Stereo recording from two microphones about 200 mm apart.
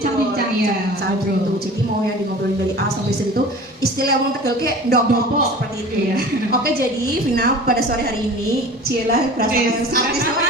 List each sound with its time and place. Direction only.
4.0 s speech: 50° right (ahead or behind)
6.1 s speech: 50° right (ahead or behind)
9.4 s speech: 50° right (ahead or behind)